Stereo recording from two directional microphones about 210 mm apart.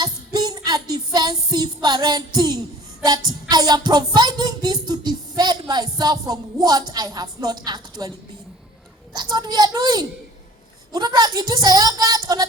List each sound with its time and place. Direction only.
0.0 s music: 20° right (ahead or behind)
9.3 s a woman's voice: 20° right (ahead or behind)